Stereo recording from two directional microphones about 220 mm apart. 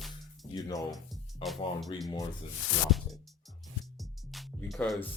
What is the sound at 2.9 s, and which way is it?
Music, centre (ahead or behind).